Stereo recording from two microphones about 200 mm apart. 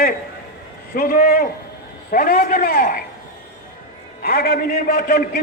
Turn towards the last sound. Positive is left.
turn(degrees=50)  # may be behind; listen again after turning